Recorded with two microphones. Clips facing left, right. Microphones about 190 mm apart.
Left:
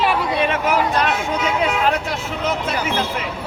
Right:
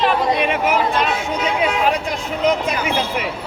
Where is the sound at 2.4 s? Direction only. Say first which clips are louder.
Right 5 dB; 15° right (ahead or behind).